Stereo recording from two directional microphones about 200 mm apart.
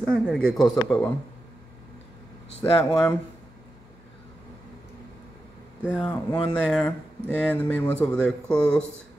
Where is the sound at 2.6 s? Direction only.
15° left (ahead or behind).